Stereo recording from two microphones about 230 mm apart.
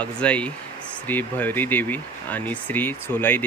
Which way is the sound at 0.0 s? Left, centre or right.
Centre.